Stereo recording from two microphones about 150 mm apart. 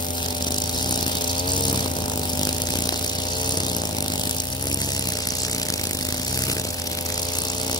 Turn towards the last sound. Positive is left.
turn(degrees=25)  # may be behind; listen again after turning